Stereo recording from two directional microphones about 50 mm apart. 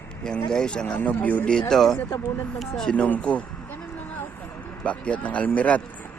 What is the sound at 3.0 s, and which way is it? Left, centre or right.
Speech, left.